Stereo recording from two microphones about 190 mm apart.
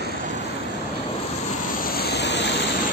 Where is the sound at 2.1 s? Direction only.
65° left (ahead or behind).